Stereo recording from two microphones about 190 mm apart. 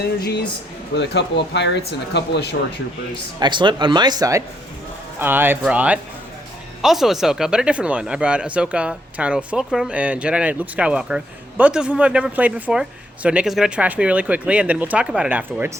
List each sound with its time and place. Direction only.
0.2 s speech: 60° left (ahead or behind)
3.4 s speech: 25° right (ahead or behind); by 15.7 s 10° right (ahead or behind)